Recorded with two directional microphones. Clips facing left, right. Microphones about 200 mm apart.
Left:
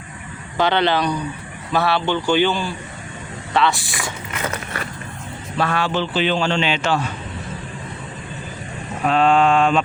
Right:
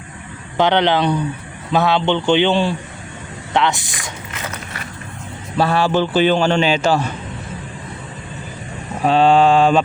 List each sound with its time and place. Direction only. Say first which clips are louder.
0.5 s a man's voice: right 3 dB; 15° right (ahead or behind)
5.5 s a man's voice: right 5 dB; 30° right (ahead or behind)
9.0 s a man's voice: right 3 dB; 30° right (ahead or behind)